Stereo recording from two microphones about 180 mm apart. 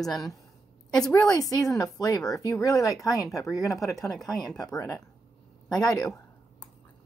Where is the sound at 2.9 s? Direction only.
Centre (ahead or behind).